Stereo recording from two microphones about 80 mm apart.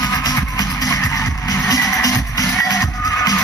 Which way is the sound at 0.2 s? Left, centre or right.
Left.